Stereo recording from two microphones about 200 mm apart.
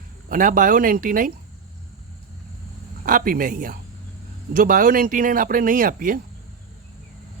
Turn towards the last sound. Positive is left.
turn(degrees=-45)  # may be behind; listen again after turning